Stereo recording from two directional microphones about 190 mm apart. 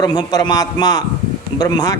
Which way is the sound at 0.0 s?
20° left (ahead or behind).